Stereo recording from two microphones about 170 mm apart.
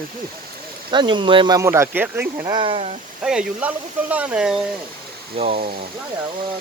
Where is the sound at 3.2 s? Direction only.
5° right (ahead or behind).